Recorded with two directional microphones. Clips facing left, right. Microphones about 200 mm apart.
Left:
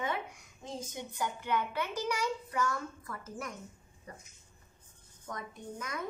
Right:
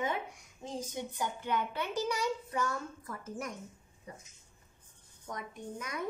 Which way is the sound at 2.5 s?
20° right (ahead or behind).